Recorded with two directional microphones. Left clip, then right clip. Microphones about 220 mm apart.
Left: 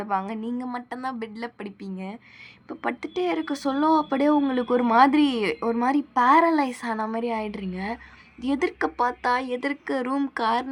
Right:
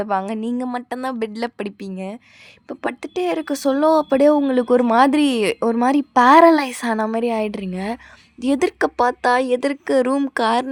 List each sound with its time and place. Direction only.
0.0 s speech: 50° right (ahead or behind)